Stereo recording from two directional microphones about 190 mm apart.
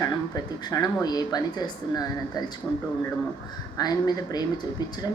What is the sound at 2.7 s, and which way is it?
Speech, 5° left (ahead or behind).